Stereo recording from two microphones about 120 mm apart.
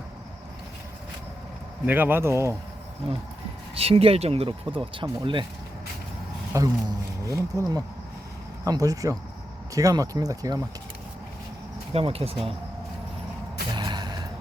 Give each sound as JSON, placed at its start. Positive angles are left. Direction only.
{"t": 1.9, "sound": "speech", "side_deg": -15}
{"t": 3.8, "sound": "speech", "side_deg": -55}
{"t": 6.5, "sound": "speech", "side_deg": -30}
{"t": 11.9, "sound": "speech", "side_deg": -55}
{"t": 13.7, "sound": "a sound", "side_deg": -35}